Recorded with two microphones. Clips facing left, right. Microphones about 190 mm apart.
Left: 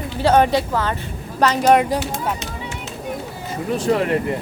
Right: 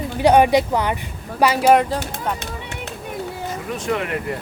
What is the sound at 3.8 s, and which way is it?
Speech, 35° left (ahead or behind).